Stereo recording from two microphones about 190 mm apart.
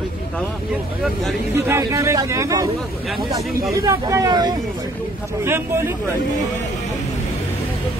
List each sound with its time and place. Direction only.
1.7 s speech: 15° right (ahead or behind)
3.7 s speech: 15° right (ahead or behind)